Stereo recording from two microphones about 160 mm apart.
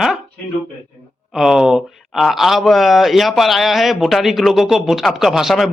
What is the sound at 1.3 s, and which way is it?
Speech, 5° right (ahead or behind).